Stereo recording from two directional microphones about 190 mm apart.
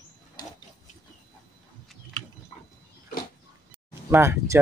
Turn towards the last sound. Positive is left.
turn(degrees=-15)  # may be behind; listen again after turning